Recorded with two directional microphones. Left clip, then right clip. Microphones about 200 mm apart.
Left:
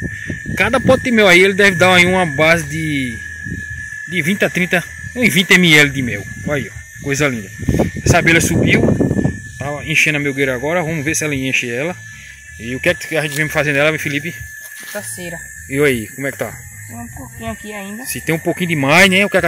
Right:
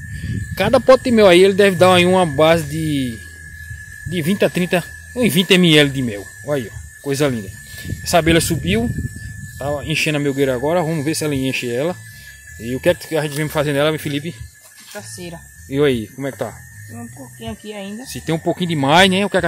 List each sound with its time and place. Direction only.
0.6 s speech: 10° right (ahead or behind)
15.0 s speech: 25° left (ahead or behind)
15.7 s speech: 5° right (ahead or behind)
18.0 s speech: centre (ahead or behind)